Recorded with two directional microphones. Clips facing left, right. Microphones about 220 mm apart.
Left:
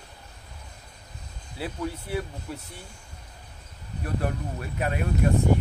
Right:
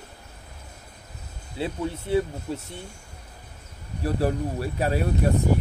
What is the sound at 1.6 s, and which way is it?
Speech, 25° right (ahead or behind).